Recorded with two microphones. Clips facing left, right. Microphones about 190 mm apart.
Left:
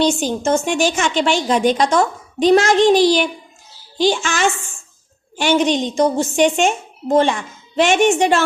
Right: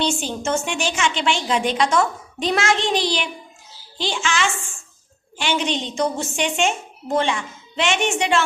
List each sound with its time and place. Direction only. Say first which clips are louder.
0.0 s a woman's voice: left 6 dB; 40° left (ahead or behind)